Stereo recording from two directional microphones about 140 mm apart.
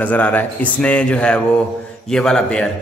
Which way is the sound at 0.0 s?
10° left (ahead or behind).